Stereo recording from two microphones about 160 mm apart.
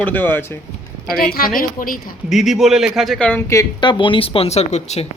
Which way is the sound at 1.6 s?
60° left (ahead or behind).